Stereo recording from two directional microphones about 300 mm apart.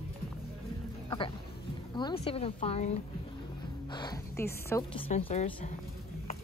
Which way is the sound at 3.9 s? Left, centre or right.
Centre.